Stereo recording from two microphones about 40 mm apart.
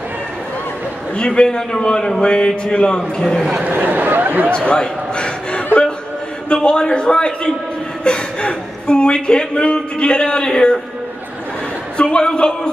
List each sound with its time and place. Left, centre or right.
1.1 s speech: left
3.5 s speech: right
4.5 s a sound: left
6.5 s speech: left
12.0 s speech: left